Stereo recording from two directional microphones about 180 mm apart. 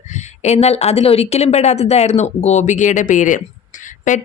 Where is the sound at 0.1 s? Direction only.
40° left (ahead or behind).